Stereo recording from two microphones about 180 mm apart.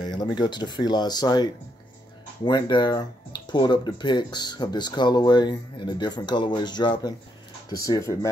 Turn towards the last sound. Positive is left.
turn(degrees=20)  # may be behind; listen again after turning